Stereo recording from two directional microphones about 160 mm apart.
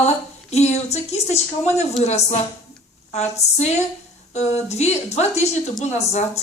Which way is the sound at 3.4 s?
45° left (ahead or behind).